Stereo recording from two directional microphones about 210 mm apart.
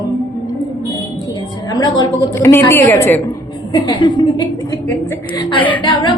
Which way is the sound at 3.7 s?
20° left (ahead or behind).